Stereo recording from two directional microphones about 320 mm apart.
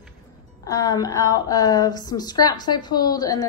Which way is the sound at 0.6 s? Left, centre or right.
Centre.